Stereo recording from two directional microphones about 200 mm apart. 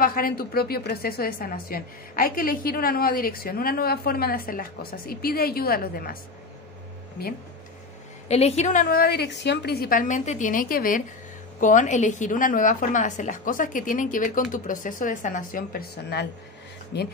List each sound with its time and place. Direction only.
0.0 s a woman's voice: 45° left (ahead or behind)
8.3 s a woman's voice: 30° left (ahead or behind); by 17.1 s 55° left (ahead or behind)